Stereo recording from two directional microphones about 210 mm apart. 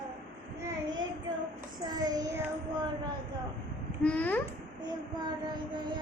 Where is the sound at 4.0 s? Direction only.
5° left (ahead or behind).